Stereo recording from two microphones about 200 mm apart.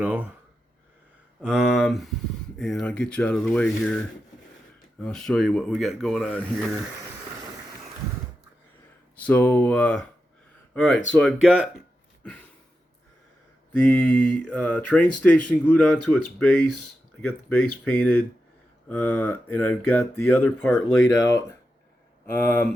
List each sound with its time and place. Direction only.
0.0 s speech: 10° right (ahead or behind)
1.4 s speech: 5° right (ahead or behind)
9.1 s speech: 10° left (ahead or behind)
13.7 s speech: 5° left (ahead or behind)
22.4 s speech: 10° left (ahead or behind)